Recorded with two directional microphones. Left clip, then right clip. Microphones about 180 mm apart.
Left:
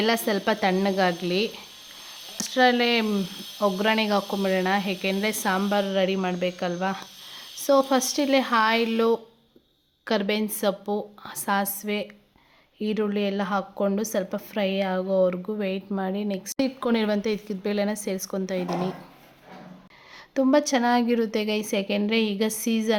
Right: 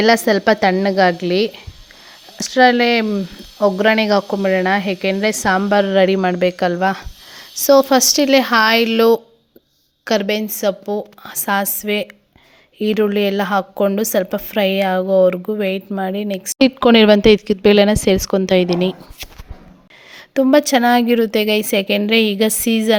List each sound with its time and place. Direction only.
0.0 s a woman's voice: 35° right (ahead or behind)
16.6 s speech: 45° right (ahead or behind)
20.1 s speech: 25° right (ahead or behind)